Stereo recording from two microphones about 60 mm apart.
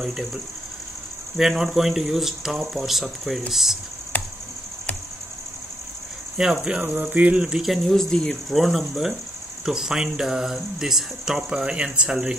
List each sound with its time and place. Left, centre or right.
0.0 s speech: centre
4.1 s a sound: left
6.3 s speech: centre
7.4 s speech: centre
8.0 s speech: centre
8.5 s speech: centre